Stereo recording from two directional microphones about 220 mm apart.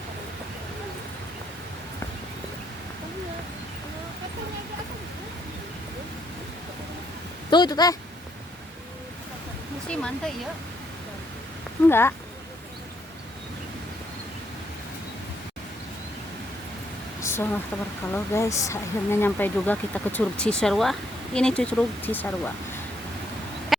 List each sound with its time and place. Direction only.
7.5 s speech: 20° left (ahead or behind)
9.9 s speech: 5° left (ahead or behind)
11.9 s speech: 10° left (ahead or behind)
17.2 s a sound: 10° left (ahead or behind)
18.1 s speech: 15° left (ahead or behind)